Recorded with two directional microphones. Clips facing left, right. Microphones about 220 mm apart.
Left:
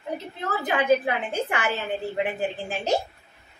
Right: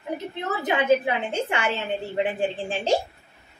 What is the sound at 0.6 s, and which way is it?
A woman's voice, 25° right (ahead or behind).